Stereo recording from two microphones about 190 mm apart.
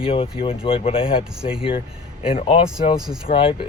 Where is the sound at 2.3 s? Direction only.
30° left (ahead or behind).